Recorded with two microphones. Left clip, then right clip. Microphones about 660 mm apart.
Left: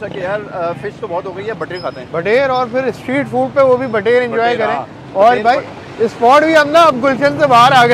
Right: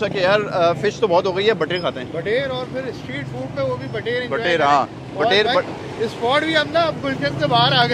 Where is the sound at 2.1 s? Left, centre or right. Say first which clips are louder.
Left 12 dB; left.